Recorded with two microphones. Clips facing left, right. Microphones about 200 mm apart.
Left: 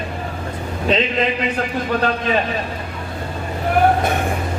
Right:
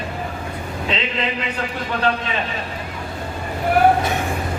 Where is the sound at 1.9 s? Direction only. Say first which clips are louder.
Left 2 dB; 40° left (ahead or behind).